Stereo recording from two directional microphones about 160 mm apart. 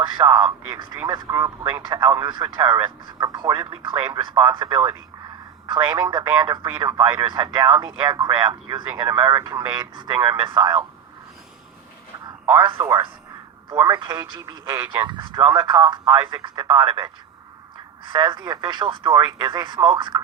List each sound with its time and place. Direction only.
0.0 s speech: 25° right (ahead or behind)
12.5 s speech: 30° right (ahead or behind)